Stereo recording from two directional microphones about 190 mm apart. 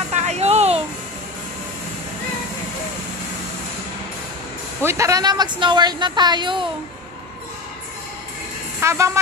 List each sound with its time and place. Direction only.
0.1 s music: 35° right (ahead or behind)
4.8 s speech: 15° right (ahead or behind)
8.8 s speech: 15° right (ahead or behind)